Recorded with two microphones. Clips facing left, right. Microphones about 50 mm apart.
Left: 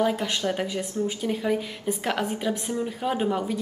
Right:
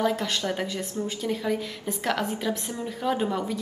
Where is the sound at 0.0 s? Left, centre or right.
Centre.